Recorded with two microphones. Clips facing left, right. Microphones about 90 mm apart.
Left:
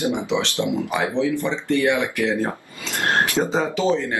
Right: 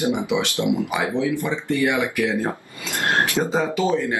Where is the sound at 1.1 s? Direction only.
10° right (ahead or behind).